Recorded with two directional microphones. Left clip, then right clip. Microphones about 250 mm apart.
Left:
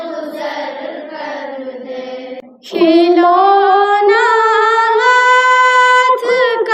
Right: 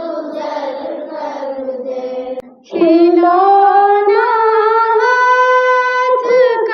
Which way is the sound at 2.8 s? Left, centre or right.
Left.